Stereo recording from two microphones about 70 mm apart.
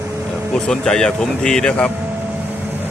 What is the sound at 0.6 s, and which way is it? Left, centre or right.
Speech, centre.